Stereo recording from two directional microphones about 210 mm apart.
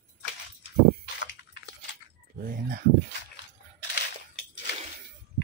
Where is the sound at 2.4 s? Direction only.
45° right (ahead or behind).